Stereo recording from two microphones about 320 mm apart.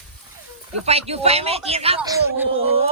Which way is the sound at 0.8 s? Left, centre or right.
Centre.